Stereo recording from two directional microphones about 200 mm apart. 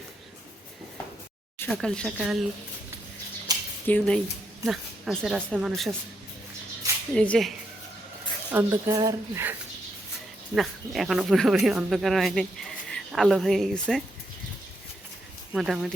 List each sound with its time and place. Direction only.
1.5 s speech: 10° left (ahead or behind)
3.5 s a sound: 20° right (ahead or behind)
3.8 s speech: 5° left (ahead or behind)
7.1 s speech: 5° left (ahead or behind)
8.5 s speech: 15° right (ahead or behind)
10.5 s speech: centre (ahead or behind)
15.5 s speech: centre (ahead or behind)